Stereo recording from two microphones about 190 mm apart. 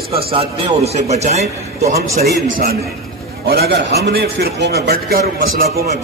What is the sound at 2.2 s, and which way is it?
A man's voice, 55° right (ahead or behind).